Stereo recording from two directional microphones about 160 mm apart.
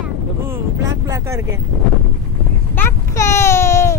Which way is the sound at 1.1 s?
20° right (ahead or behind).